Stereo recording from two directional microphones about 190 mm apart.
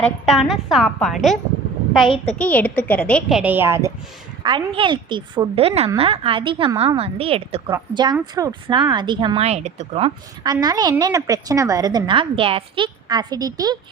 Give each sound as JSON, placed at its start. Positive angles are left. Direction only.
{"t": 0.0, "sound": "a woman's voice", "side_deg": 0}
{"t": 2.0, "sound": "a child's voice", "side_deg": 30}
{"t": 2.4, "sound": "a woman's voice", "side_deg": 10}
{"t": 4.4, "sound": "a woman's voice", "side_deg": -25}
{"t": 10.4, "sound": "a woman's voice", "side_deg": -20}